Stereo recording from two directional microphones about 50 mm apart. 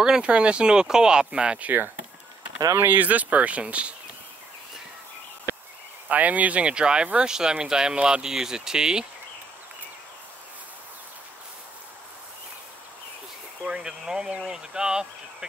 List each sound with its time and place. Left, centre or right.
0.0 s speech: centre
2.9 s speech: right
6.0 s speech: right; by 9.0 s centre
13.7 s speech: centre